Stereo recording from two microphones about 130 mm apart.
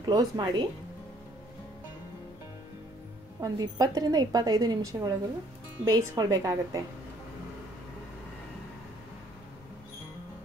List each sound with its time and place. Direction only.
0.0 s speech: 35° right (ahead or behind)
3.3 s a woman's voice: 30° right (ahead or behind)